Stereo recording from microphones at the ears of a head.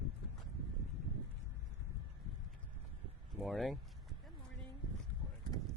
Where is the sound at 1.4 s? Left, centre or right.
Left.